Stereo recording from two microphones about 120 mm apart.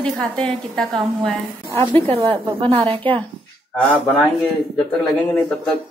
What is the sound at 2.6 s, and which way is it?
Speech, 50° right (ahead or behind).